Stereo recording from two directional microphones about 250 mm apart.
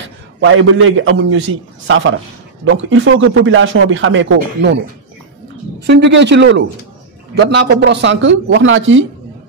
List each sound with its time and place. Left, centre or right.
0.4 s speech: right
5.8 s speech: right